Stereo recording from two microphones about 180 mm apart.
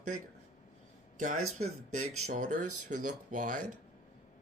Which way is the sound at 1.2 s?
40° right (ahead or behind).